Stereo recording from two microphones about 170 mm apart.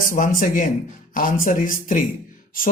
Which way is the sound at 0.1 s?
55° left (ahead or behind).